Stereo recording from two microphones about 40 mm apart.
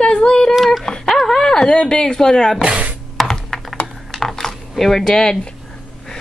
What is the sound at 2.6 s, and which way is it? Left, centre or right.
Music, right.